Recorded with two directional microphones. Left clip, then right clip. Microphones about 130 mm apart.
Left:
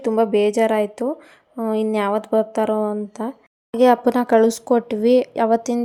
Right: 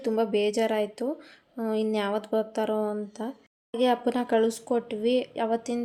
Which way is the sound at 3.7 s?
55° left (ahead or behind).